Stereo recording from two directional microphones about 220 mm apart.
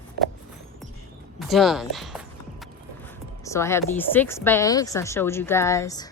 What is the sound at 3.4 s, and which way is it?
Speech, 10° left (ahead or behind).